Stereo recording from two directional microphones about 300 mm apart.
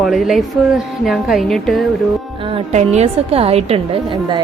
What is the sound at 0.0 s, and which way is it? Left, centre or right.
A woman's voice, centre.